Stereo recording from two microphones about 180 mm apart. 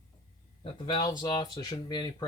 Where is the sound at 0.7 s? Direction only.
25° left (ahead or behind).